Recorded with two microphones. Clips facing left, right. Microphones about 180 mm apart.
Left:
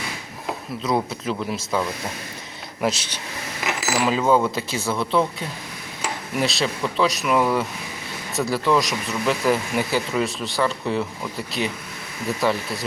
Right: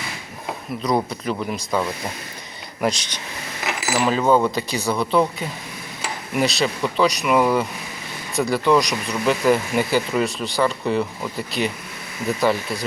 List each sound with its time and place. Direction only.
0.8 s speech: 5° left (ahead or behind)